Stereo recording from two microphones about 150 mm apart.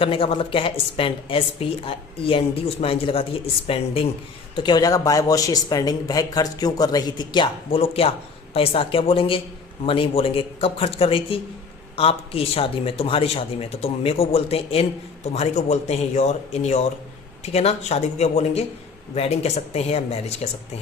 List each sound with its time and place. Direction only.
0.0 s speech: 35° left (ahead or behind)
4.5 s speech: 30° left (ahead or behind); by 20.5 s 45° left (ahead or behind)